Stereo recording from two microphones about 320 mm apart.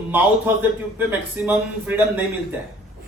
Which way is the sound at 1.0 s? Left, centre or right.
Centre.